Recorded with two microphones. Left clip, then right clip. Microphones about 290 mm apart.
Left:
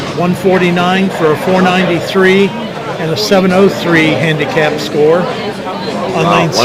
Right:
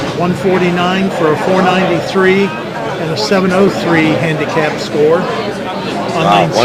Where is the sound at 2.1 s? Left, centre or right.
Left.